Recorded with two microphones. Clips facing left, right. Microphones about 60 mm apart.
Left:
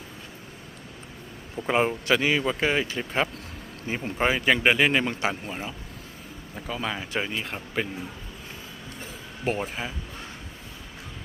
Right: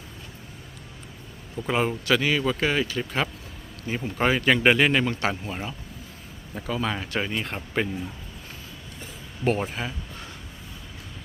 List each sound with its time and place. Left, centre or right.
1.5 s speech: left
4.2 s speech: centre
6.7 s speech: centre
9.4 s speech: centre